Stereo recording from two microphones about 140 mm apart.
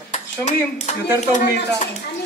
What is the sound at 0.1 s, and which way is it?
Speech, 55° left (ahead or behind).